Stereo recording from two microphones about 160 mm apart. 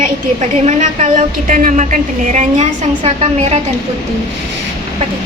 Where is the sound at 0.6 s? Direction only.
50° right (ahead or behind).